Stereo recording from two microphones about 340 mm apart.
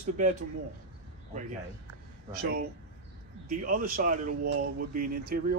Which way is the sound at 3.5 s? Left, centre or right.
Right.